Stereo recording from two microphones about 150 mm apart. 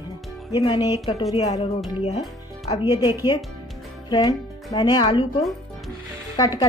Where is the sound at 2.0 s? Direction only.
45° left (ahead or behind).